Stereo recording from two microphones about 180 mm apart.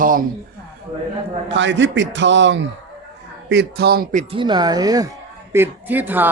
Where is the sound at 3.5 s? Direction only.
65° right (ahead or behind).